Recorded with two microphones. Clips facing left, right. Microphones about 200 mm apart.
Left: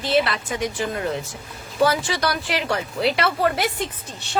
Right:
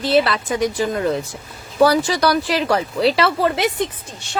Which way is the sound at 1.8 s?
40° right (ahead or behind).